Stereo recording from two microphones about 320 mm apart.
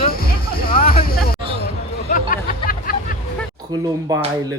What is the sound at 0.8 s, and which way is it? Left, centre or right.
Vehicle, left.